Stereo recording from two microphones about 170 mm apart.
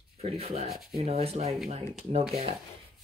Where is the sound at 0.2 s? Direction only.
35° right (ahead or behind).